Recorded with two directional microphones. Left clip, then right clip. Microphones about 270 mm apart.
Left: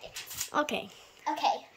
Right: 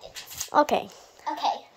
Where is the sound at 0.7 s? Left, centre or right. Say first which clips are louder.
Right 9 dB; centre.